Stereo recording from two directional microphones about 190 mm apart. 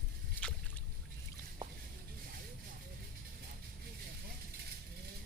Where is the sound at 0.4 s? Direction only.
10° left (ahead or behind).